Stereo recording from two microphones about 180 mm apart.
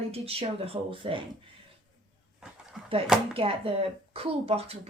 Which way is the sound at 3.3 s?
30° right (ahead or behind).